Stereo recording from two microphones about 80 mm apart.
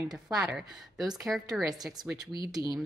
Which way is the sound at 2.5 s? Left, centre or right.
Right.